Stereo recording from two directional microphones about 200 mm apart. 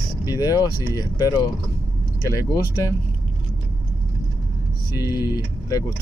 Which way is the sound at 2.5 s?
20° left (ahead or behind).